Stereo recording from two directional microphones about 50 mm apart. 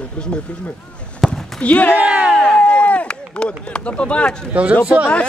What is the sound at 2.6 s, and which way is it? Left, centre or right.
Chop, left.